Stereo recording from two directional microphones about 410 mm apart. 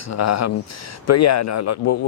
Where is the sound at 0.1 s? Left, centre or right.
Left.